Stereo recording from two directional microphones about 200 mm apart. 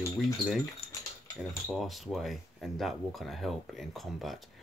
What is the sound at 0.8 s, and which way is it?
Keys jangling, 30° left (ahead or behind).